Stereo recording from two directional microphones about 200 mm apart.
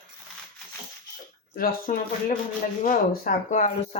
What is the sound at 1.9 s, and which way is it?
Speech, 40° left (ahead or behind).